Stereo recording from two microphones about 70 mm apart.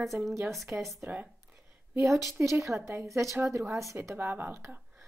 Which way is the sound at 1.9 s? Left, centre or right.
Right.